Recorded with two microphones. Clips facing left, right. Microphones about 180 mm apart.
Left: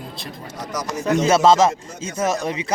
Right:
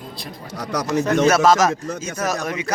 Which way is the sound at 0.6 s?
70° right (ahead or behind).